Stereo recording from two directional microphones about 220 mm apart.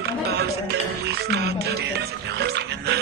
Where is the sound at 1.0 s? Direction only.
50° right (ahead or behind).